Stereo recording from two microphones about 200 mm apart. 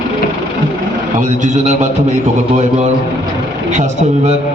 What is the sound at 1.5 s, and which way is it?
Speech, 35° right (ahead or behind).